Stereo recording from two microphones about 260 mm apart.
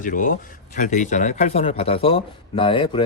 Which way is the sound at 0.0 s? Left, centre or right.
Left.